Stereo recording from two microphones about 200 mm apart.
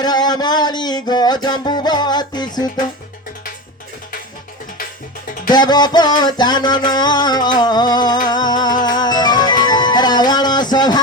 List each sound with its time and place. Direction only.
0.0 s music: 20° left (ahead or behind)
5.5 s music: 20° left (ahead or behind)